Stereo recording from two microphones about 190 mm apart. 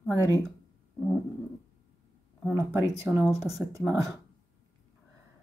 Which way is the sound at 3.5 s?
15° right (ahead or behind).